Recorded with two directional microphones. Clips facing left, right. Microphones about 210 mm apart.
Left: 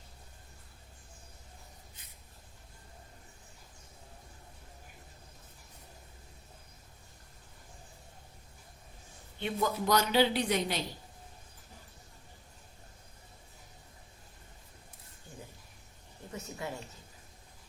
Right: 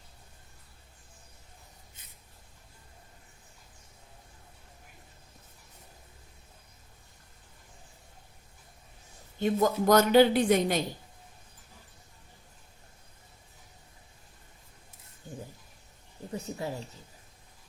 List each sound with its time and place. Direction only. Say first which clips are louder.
9.4 s a woman's voice: right 7 dB; 45° right (ahead or behind)
16.3 s speech: right 5 dB; 35° right (ahead or behind)